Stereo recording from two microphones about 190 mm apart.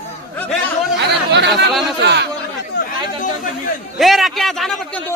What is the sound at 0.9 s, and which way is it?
Chatter, 65° right (ahead or behind).